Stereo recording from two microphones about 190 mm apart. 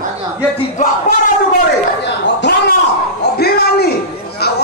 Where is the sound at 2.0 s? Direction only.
65° left (ahead or behind).